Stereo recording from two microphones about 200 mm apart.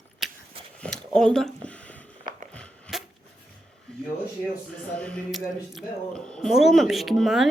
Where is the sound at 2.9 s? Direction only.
Centre (ahead or behind).